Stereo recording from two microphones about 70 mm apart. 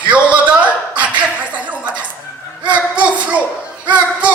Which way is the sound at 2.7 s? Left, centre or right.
Centre.